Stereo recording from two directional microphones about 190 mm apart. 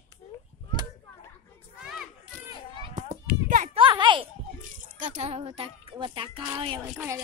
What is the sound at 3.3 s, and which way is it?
Children playing, 45° right (ahead or behind).